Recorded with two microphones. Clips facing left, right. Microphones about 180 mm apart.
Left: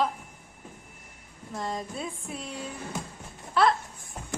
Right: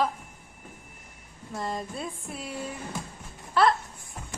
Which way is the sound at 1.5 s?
Centre (ahead or behind).